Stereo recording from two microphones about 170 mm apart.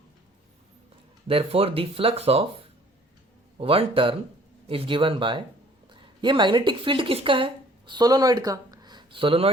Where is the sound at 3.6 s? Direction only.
35° right (ahead or behind).